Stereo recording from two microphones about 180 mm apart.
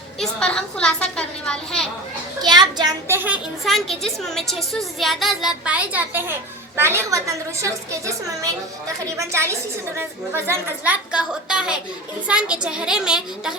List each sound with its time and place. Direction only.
0.2 s a woman's voice: 5° left (ahead or behind)
2.4 s a child's voice: 25° right (ahead or behind)
3.2 s a woman's voice: centre (ahead or behind); by 8.1 s 15° right (ahead or behind)
9.1 s a woman's voice: 15° right (ahead or behind)